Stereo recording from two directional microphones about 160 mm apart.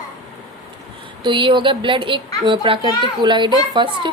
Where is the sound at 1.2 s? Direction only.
30° right (ahead or behind).